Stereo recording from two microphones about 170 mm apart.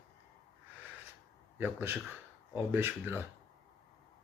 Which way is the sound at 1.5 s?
10° right (ahead or behind).